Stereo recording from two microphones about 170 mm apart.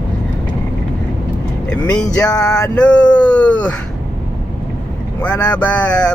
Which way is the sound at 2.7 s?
5° left (ahead or behind).